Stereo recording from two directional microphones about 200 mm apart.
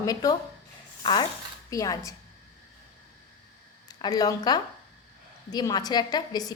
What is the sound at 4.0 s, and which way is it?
A woman's voice, 20° left (ahead or behind).